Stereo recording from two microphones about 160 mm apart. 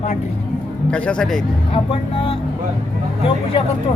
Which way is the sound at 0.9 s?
5° left (ahead or behind).